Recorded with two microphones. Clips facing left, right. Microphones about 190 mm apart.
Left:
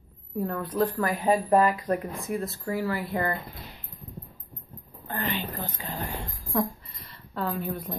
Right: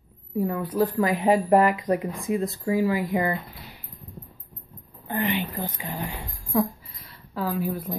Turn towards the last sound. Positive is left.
turn(degrees=0)  # may be behind; listen again after turning